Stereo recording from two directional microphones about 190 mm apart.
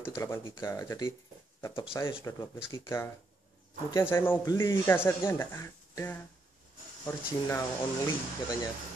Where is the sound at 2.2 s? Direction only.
20° left (ahead or behind).